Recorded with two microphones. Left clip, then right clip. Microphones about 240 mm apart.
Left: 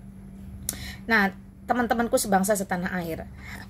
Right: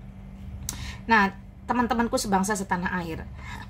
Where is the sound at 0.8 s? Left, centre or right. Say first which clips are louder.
Right 2 dB; centre.